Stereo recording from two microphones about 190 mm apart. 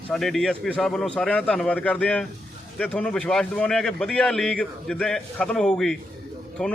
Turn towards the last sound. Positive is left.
turn(degrees=5)  # may be behind; listen again after turning